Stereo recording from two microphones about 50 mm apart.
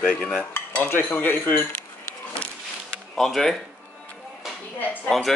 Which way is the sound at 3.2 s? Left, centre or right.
Centre.